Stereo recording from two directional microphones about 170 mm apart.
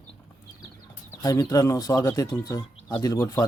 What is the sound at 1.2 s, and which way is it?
Speech, 20° left (ahead or behind).